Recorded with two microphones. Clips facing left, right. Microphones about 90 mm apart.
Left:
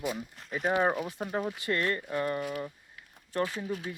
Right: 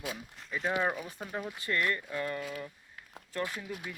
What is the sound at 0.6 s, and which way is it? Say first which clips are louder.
Speech: left 4 dB; 30° left (ahead or behind).